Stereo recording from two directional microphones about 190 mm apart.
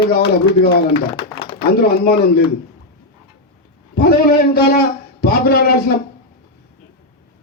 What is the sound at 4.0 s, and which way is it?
A man's voice, 55° left (ahead or behind).